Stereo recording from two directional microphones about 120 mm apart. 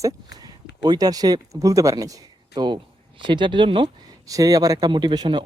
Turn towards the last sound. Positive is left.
turn(degrees=-35)  # may be behind; listen again after turning